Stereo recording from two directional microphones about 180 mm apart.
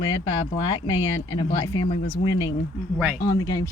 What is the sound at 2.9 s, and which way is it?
Speech, 5° right (ahead or behind).